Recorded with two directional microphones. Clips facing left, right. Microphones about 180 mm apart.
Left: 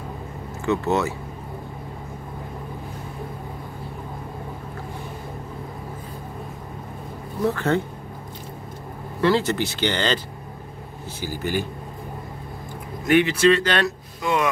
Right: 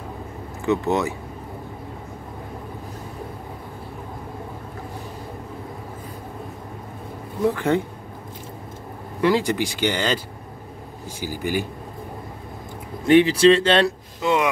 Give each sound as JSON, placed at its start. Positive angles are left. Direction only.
{"t": 0.7, "sound": "speech", "side_deg": -15}
{"t": 7.4, "sound": "speech", "side_deg": -15}
{"t": 9.2, "sound": "speech", "side_deg": -15}
{"t": 13.0, "sound": "speech", "side_deg": -30}